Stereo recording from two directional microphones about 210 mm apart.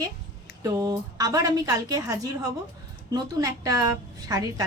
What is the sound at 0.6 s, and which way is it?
A woman's voice, 15° right (ahead or behind).